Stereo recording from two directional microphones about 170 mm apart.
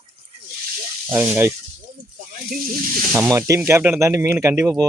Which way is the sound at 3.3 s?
15° right (ahead or behind).